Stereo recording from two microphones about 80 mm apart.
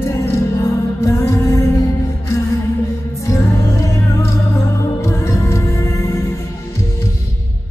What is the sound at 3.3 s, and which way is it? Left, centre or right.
Music, left.